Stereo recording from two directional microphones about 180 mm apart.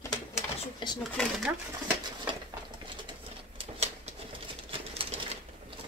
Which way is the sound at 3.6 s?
35° right (ahead or behind).